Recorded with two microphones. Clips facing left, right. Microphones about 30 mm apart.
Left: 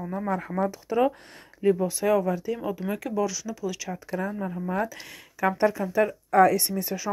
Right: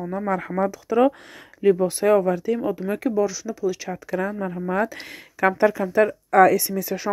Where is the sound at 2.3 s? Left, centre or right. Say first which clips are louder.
Right 6 dB; right.